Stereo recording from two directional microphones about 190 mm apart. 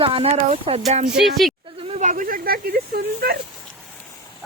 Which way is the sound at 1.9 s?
40° right (ahead or behind).